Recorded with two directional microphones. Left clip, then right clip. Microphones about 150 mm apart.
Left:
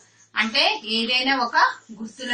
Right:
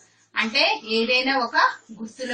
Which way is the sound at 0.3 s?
15° left (ahead or behind).